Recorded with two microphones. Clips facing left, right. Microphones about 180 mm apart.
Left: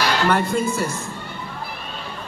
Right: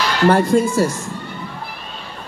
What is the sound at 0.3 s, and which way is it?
Speech, 35° right (ahead or behind).